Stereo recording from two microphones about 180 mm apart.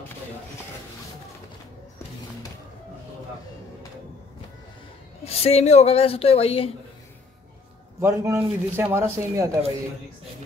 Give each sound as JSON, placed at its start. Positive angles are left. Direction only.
{"t": 5.2, "sound": "speech", "side_deg": 35}
{"t": 8.0, "sound": "a man's voice", "side_deg": -15}